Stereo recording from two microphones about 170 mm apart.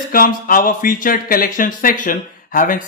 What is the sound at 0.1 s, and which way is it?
Speech, 55° left (ahead or behind).